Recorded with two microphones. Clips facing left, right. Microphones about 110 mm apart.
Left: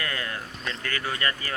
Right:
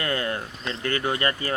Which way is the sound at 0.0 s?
30° right (ahead or behind).